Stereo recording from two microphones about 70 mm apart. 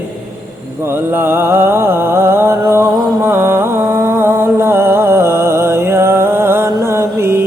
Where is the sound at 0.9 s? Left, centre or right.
Right.